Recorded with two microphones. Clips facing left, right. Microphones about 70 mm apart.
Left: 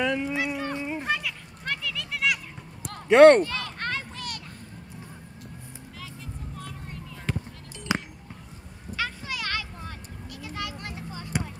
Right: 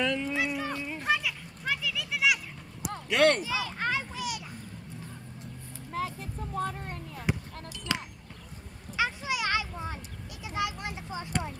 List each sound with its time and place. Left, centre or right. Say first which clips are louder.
0.0 s speech: left 3 dB; centre
0.4 s a sound: left 2 dB; centre
0.7 s children playing: left 5 dB; left
1.0 s children playing: even; centre
3.1 s speech: left 11 dB; left
3.4 s children playing: right 1 dB; centre
5.9 s vehicle: right 10 dB; right
7.3 s a sound: even; centre
7.9 s basketball bounce: left 5 dB; centre
8.9 s a sound: right 2 dB; centre